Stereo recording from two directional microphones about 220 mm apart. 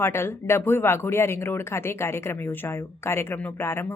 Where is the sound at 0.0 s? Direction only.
10° left (ahead or behind).